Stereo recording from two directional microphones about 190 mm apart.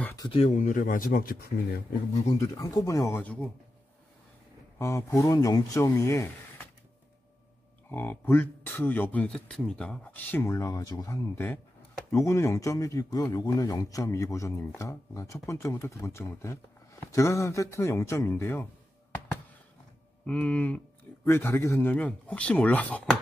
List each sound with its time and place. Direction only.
0.0 s a sound: 15° left (ahead or behind)
0.3 s speech: 35° left (ahead or behind); by 1.5 s 50° left (ahead or behind)
2.3 s a man's voice: 15° left (ahead or behind)
4.7 s a man's voice: 15° left (ahead or behind)
7.9 s a man's voice: 10° left (ahead or behind)
20.2 s a man's voice: 5° left (ahead or behind)